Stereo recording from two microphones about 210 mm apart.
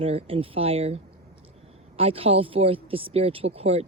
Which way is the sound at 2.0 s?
25° right (ahead or behind).